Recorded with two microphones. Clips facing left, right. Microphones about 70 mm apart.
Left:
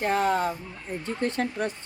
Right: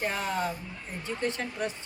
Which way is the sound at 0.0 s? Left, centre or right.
Left.